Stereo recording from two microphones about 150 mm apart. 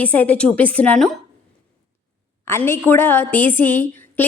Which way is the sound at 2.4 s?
15° left (ahead or behind).